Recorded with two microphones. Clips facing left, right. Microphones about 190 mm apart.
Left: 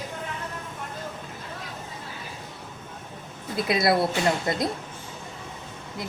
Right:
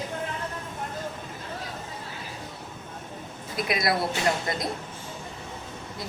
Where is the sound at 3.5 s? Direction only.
25° left (ahead or behind).